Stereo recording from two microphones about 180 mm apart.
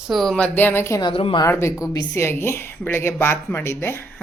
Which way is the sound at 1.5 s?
15° left (ahead or behind).